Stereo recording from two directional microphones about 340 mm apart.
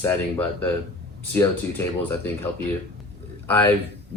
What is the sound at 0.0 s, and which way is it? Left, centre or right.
Speech, centre.